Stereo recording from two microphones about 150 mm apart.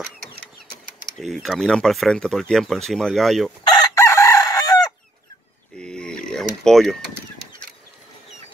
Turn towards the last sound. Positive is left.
turn(degrees=5)  # may be behind; listen again after turning